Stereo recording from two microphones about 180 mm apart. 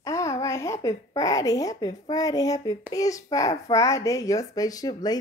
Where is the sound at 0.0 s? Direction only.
15° left (ahead or behind).